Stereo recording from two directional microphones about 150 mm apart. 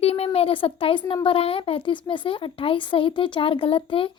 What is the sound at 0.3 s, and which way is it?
A woman's voice, 40° left (ahead or behind).